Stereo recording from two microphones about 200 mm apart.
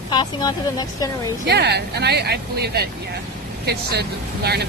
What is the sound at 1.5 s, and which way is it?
Speech, 55° right (ahead or behind).